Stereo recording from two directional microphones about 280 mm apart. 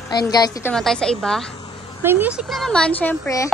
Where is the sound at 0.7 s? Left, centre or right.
Centre.